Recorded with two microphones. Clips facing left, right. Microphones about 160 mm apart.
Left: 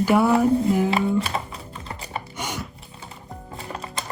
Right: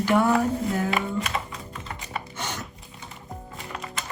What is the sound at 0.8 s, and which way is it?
Music, 30° left (ahead or behind).